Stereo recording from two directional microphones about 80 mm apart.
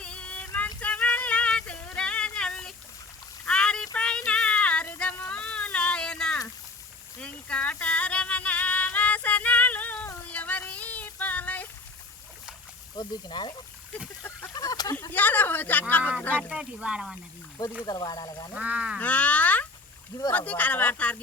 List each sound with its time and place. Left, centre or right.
0.0 s a sound: centre
3.9 s child singing: centre
5.3 s a sound: centre
7.2 s music: centre
10.3 s child singing: centre
13.0 s speech: left
14.5 s a sound: left
15.1 s a sound: left
16.5 s speech: centre
17.8 s speech: left
18.5 s speech: centre
18.9 s frog: centre
20.3 s speech: centre